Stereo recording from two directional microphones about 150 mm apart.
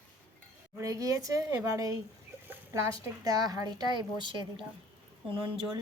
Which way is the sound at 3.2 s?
25° right (ahead or behind).